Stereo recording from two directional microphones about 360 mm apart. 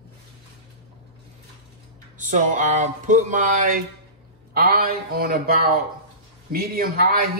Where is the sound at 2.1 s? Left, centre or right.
Right.